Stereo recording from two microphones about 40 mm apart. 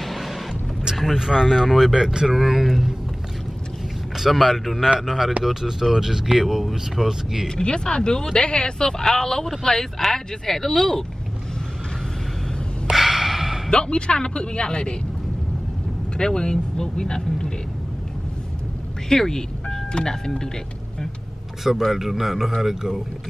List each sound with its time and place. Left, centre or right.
0.0 s vehicle: centre
0.9 s speech: centre
4.2 s speech: centre
7.4 s speech: centre
12.9 s gasp: centre
13.7 s a woman's voice: left
16.2 s speech: centre
19.0 s telephone dialing: centre
19.9 s speech: centre
21.8 s speech: centre